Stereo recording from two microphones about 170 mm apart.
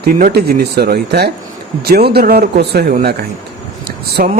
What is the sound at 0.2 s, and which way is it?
A man's voice, 60° right (ahead or behind).